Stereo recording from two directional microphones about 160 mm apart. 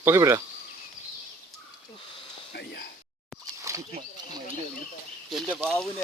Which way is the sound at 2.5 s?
90° left.